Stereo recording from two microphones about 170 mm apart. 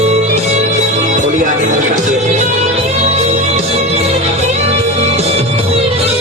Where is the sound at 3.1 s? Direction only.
40° right (ahead or behind).